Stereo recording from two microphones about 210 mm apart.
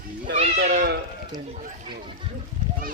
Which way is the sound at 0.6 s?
45° right (ahead or behind).